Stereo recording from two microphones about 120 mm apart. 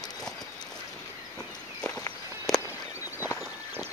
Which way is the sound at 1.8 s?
10° left (ahead or behind).